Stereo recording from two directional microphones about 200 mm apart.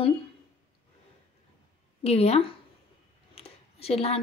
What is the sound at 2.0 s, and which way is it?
A woman's voice, 30° left (ahead or behind).